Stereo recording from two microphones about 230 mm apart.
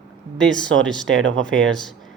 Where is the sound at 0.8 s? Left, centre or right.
Centre.